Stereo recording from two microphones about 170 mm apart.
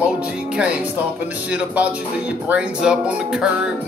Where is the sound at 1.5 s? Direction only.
10° right (ahead or behind).